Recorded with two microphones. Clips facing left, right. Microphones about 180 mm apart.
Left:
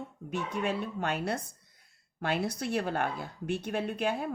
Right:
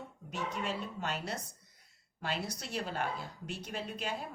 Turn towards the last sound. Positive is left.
turn(degrees=55)  # may be behind; listen again after turning